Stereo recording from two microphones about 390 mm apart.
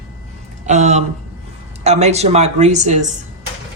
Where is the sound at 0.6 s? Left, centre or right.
Centre.